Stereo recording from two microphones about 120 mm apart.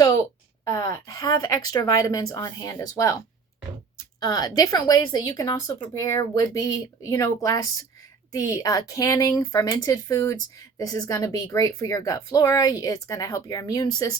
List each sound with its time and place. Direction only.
0.6 s a woman's voice: 35° left (ahead or behind)